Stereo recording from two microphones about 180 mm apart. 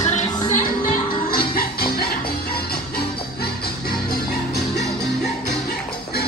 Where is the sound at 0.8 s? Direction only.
55° left (ahead or behind).